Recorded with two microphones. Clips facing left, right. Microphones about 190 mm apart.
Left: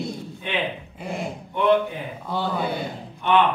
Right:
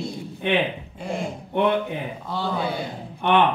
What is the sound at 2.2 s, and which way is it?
Speech, 5° left (ahead or behind).